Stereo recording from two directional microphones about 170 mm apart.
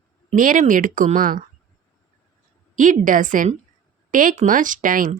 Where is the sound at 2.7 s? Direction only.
50° right (ahead or behind).